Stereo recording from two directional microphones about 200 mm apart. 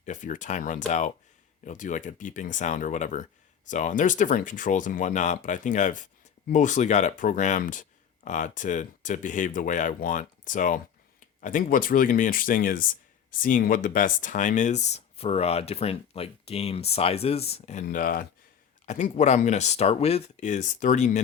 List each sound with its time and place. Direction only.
0.0 s speech: 40° left (ahead or behind)